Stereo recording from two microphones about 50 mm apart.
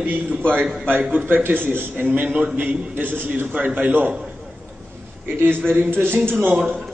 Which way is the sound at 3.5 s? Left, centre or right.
Right.